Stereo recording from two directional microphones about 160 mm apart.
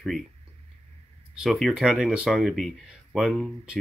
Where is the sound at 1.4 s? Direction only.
Centre (ahead or behind).